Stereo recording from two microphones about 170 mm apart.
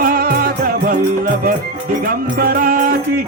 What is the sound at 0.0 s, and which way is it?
Music, 60° right (ahead or behind).